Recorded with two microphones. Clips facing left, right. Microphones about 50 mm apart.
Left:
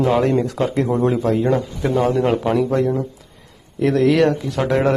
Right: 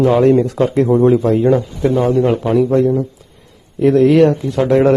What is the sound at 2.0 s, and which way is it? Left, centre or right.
Speech, left.